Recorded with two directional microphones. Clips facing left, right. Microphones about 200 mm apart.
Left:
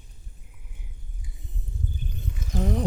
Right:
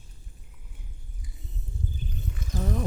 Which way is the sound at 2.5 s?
15° left (ahead or behind).